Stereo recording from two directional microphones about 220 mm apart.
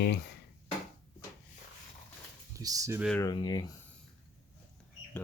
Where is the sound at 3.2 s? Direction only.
20° left (ahead or behind).